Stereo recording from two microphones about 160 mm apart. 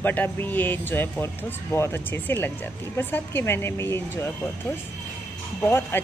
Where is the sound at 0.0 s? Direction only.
10° left (ahead or behind).